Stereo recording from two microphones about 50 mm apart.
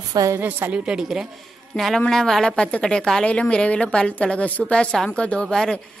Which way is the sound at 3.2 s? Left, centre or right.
Left.